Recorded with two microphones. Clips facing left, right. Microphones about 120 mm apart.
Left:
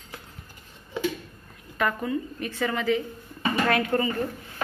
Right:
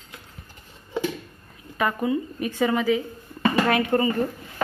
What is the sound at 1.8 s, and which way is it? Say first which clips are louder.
Speech: right 3 dB; 10° right (ahead or behind).